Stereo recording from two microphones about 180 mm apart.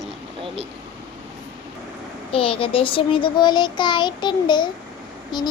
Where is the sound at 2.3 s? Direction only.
30° left (ahead or behind).